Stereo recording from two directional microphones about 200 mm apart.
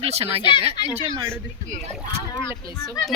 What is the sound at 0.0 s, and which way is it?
Speech, 30° right (ahead or behind).